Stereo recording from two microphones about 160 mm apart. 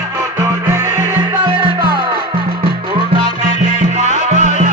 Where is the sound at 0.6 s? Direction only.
15° right (ahead or behind).